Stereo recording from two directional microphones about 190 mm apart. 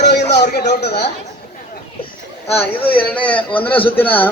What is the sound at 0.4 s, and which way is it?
Speech, 60° left (ahead or behind).